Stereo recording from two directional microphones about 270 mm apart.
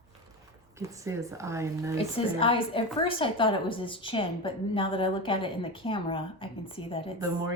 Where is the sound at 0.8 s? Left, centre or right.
Centre.